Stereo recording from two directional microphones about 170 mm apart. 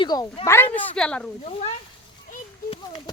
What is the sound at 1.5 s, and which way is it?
Speech, 35° left (ahead or behind).